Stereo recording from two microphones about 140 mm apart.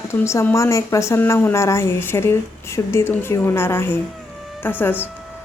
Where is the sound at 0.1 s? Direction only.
20° left (ahead or behind).